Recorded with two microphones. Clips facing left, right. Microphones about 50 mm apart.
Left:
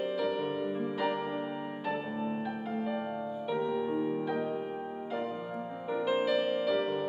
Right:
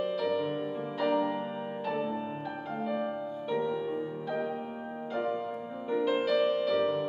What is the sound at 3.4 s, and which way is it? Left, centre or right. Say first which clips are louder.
Music: even; centre.